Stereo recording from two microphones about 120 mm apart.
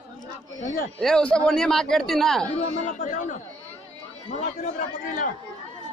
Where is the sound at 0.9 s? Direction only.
5° left (ahead or behind).